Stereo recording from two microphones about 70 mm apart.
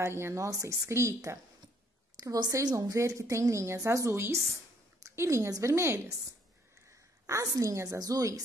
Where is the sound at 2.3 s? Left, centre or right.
Right.